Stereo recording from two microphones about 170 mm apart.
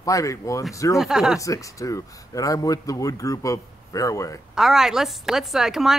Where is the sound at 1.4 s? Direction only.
20° left (ahead or behind).